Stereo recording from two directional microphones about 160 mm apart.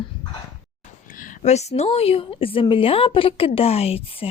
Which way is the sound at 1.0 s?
55° left (ahead or behind).